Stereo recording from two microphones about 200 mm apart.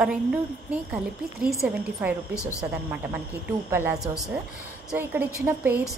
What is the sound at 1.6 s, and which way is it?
A woman's voice, 10° right (ahead or behind).